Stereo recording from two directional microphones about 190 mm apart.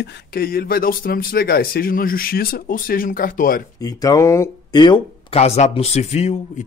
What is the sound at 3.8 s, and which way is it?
Speech, 20° left (ahead or behind).